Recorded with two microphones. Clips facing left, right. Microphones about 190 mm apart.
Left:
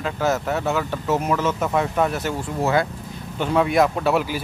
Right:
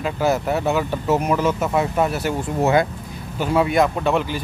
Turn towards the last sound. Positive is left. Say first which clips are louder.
# even
turn(degrees=5)  # may be behind; listen again after turning